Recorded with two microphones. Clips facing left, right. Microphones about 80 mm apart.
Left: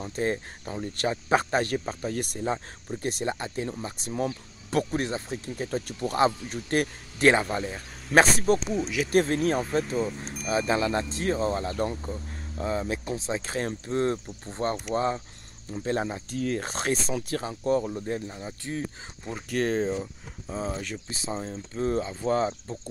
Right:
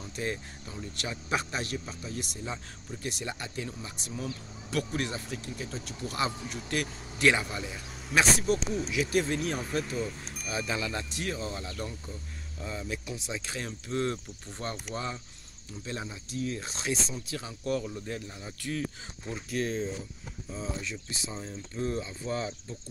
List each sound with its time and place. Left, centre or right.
0.0 s speech: left
0.7 s speech: left
5.7 s speech: left
9.6 s speech: left
10.2 s wind chime: centre
10.7 s speech: left
19.3 s speech: left
20.7 s speech: left